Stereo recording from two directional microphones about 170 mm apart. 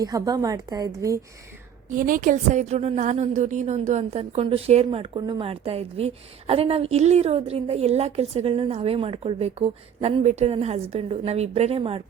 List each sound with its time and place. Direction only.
0.0 s a woman's voice: 20° right (ahead or behind)
1.9 s a woman's voice: 55° right (ahead or behind); by 12.0 s 35° right (ahead or behind)